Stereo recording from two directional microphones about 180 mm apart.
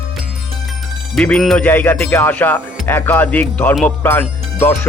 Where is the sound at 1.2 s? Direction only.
5° left (ahead or behind).